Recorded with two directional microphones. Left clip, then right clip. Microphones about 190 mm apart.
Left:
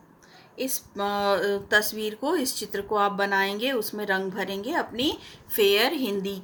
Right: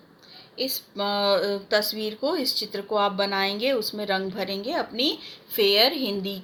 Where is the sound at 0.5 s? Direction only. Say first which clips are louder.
Right 2 dB; 60° left (ahead or behind).